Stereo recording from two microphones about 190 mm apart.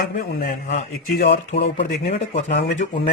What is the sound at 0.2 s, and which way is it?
A man's voice, 50° left (ahead or behind).